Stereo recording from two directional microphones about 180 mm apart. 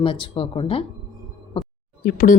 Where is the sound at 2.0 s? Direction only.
50° left (ahead or behind).